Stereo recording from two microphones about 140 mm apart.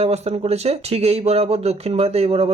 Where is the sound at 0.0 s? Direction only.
50° right (ahead or behind).